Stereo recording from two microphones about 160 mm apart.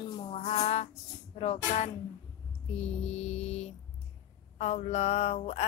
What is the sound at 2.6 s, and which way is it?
Mantra, 40° left (ahead or behind).